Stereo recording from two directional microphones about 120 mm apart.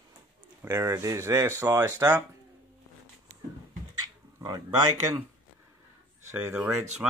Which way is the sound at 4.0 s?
35° right (ahead or behind).